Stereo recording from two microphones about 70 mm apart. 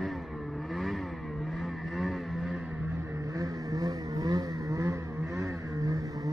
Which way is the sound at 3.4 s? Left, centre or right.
Right.